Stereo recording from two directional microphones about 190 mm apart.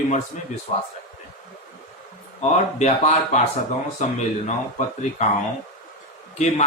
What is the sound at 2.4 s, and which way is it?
Speech, 35° left (ahead or behind).